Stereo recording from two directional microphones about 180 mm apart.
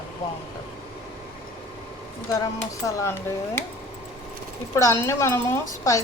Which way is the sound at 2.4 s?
20° left (ahead or behind).